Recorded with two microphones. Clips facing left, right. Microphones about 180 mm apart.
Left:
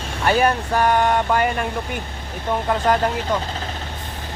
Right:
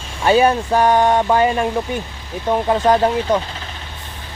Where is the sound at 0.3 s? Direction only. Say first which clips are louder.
Right 5 dB; 20° right (ahead or behind).